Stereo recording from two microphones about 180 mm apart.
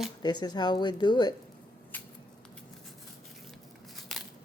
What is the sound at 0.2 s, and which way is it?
Speech, 25° left (ahead or behind).